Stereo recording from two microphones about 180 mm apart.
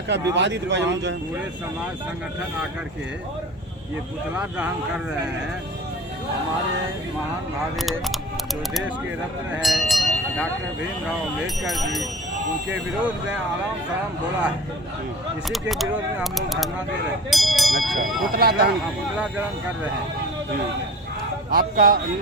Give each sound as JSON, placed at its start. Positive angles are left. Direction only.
{"t": 0.1, "sound": "speech", "side_deg": -80}
{"t": 4.4, "sound": "speech", "side_deg": -5}
{"t": 7.8, "sound": "speech", "side_deg": 0}
{"t": 9.6, "sound": "a sound", "side_deg": 0}
{"t": 11.6, "sound": "speech", "side_deg": 0}
{"t": 15.7, "sound": "speech", "side_deg": 0}
{"t": 18.3, "sound": "speech", "side_deg": -55}
{"t": 21.5, "sound": "speech", "side_deg": -55}